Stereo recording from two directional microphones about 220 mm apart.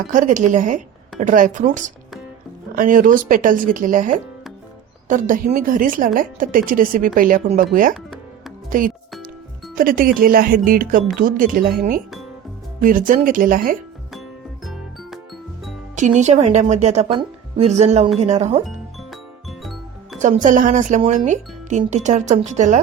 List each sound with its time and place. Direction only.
0.1 s speech: 35° right (ahead or behind)
14.1 s music: centre (ahead or behind)
16.0 s speech: 35° right (ahead or behind)
19.1 s music: centre (ahead or behind)
20.2 s speech: 35° right (ahead or behind)